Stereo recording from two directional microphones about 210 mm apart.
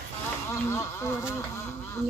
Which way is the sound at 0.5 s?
15° left (ahead or behind).